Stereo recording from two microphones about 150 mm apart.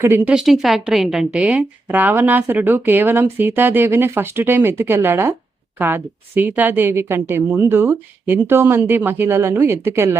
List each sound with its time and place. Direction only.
0.0 s a woman's voice: 15° right (ahead or behind)
0.3 s a woman's voice: centre (ahead or behind)